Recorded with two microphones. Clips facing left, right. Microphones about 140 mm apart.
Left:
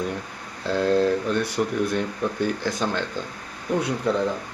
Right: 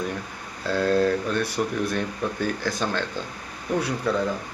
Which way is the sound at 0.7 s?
20° left (ahead or behind).